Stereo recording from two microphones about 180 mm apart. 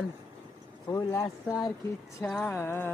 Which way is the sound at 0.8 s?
20° left (ahead or behind).